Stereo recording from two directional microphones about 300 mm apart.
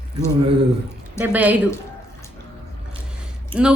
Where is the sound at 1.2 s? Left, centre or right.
Centre.